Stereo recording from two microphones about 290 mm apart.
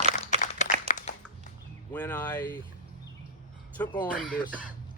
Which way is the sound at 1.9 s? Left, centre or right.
Centre.